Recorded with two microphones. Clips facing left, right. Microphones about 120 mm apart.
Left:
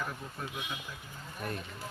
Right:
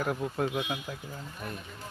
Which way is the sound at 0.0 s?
70° right (ahead or behind).